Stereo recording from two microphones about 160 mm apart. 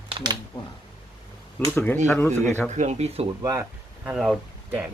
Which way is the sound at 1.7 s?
10° left (ahead or behind).